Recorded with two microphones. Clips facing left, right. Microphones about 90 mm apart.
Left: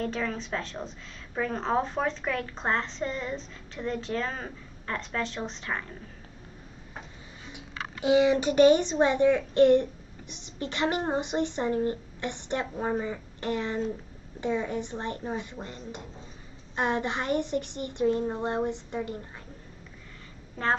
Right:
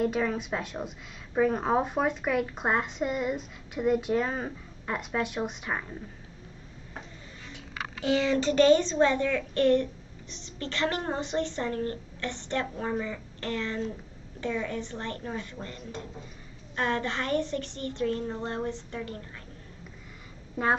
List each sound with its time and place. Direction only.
0.0 s a woman's voice: 10° right (ahead or behind)
8.0 s a woman's voice: 15° left (ahead or behind)
20.6 s a woman's voice: 10° right (ahead or behind)